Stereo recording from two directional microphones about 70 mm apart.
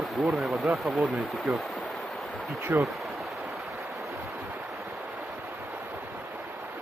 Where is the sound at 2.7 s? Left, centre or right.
Right.